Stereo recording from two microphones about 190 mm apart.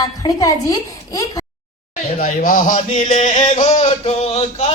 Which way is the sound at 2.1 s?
45° left (ahead or behind).